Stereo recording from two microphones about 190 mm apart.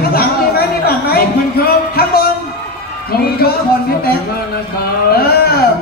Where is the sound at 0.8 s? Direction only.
55° left (ahead or behind).